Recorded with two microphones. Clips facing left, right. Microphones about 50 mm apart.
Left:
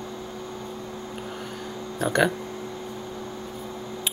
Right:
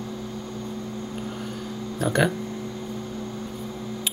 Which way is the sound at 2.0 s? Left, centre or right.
Centre.